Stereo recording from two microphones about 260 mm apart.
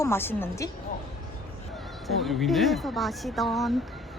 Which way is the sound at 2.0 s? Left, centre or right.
Centre.